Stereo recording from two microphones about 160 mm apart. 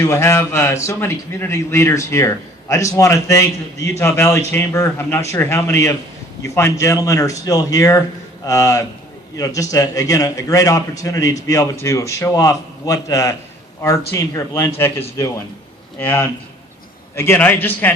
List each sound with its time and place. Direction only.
0.0 s a man's voice: 20° left (ahead or behind)